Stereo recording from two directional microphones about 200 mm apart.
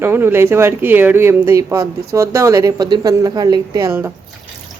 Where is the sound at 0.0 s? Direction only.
10° right (ahead or behind).